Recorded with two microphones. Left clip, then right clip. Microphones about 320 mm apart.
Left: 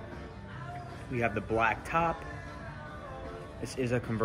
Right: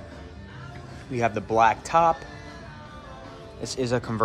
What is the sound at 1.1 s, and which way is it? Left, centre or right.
Speech, centre.